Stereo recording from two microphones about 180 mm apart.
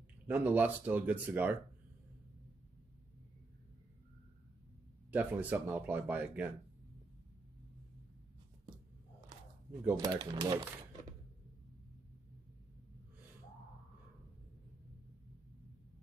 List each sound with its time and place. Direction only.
0.3 s speech: 10° right (ahead or behind)
5.1 s speech: 10° right (ahead or behind)
9.7 s speech: 15° right (ahead or behind)